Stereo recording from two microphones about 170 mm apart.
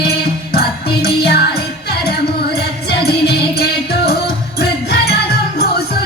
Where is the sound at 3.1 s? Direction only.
70° left (ahead or behind).